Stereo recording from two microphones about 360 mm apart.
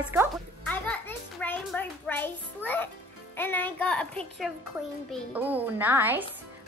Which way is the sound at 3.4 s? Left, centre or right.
Centre.